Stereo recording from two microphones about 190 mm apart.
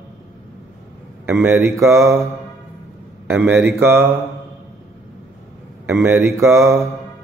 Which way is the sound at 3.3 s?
10° right (ahead or behind).